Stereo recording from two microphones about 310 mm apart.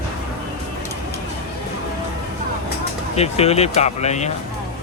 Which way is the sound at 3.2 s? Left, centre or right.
Centre.